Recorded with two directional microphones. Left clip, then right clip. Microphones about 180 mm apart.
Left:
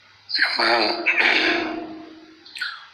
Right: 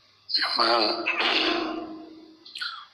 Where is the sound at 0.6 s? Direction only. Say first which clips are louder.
Left 2 dB; 45° right (ahead or behind).